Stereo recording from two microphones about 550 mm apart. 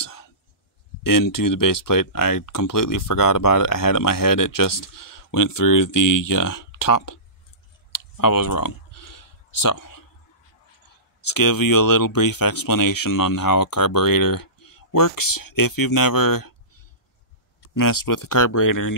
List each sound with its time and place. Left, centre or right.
0.0 s whispering: left
1.0 s speech: left
7.9 s a sound: left
11.1 s speech: left
17.7 s speech: left